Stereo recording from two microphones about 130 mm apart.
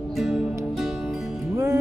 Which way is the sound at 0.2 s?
5° right (ahead or behind).